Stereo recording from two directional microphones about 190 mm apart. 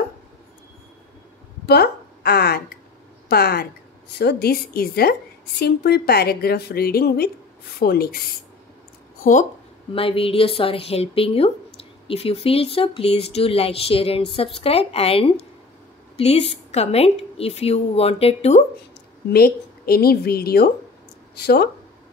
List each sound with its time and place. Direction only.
1.7 s a woman's voice: 55° left (ahead or behind)
9.2 s speech: 40° left (ahead or behind)
9.9 s a woman's voice: 30° left (ahead or behind)
19.3 s a woman's voice: 55° left (ahead or behind)